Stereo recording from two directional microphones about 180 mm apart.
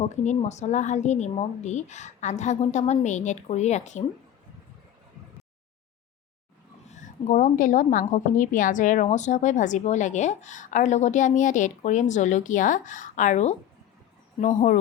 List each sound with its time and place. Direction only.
0.1 s a woman's voice: 40° left (ahead or behind)
6.8 s a woman's voice: 40° left (ahead or behind)